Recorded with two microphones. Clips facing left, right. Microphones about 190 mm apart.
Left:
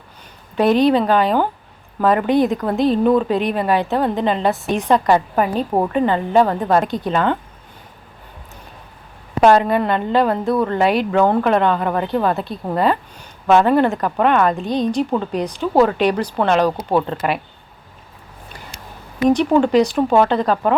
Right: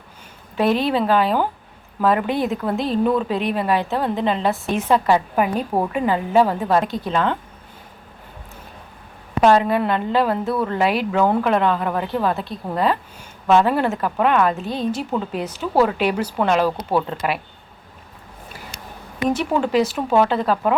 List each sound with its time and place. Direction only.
0.5 s a woman's voice: centre (ahead or behind)
9.4 s a woman's voice: centre (ahead or behind)
16.6 s speech: 15° left (ahead or behind)
17.1 s a woman's voice: centre (ahead or behind)
19.6 s a woman's voice: 5° right (ahead or behind)